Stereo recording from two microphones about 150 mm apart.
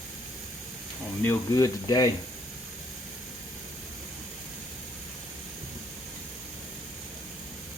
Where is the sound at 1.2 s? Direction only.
20° left (ahead or behind).